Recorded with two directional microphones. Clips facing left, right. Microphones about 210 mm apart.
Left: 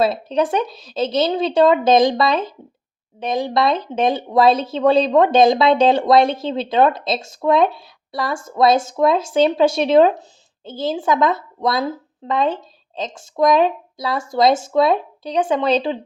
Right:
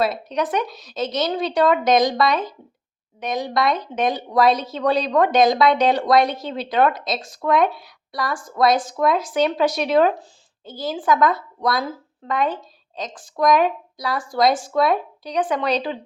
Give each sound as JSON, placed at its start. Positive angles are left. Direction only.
{"t": 0.0, "sound": "speech", "side_deg": 30}